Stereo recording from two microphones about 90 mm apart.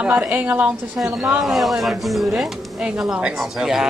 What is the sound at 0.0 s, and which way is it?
Speech, 15° right (ahead or behind).